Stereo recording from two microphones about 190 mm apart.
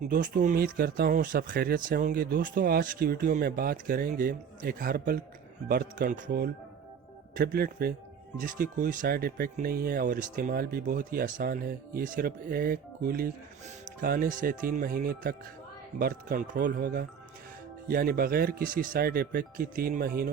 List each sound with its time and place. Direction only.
0.1 s speech: 45° right (ahead or behind)